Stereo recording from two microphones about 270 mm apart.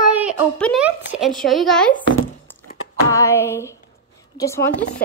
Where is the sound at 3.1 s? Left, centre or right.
Centre.